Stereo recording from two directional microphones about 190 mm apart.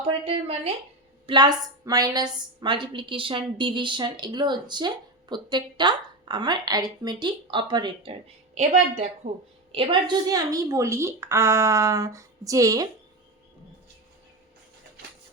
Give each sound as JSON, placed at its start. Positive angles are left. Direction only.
{"t": 0.0, "sound": "a woman's voice", "side_deg": -30}
{"t": 8.5, "sound": "a woman's voice", "side_deg": -40}
{"t": 9.7, "sound": "a woman's voice", "side_deg": -25}